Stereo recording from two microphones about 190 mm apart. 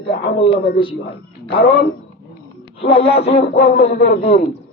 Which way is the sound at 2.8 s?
30° left (ahead or behind).